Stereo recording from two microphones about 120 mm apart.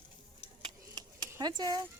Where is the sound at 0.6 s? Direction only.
35° right (ahead or behind).